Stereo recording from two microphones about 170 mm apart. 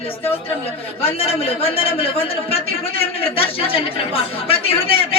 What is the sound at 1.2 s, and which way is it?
Speech, 35° left (ahead or behind).